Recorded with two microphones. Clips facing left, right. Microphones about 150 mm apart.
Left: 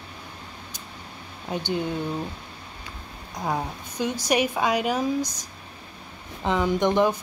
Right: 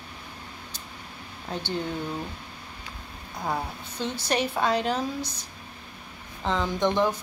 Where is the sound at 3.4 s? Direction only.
15° left (ahead or behind).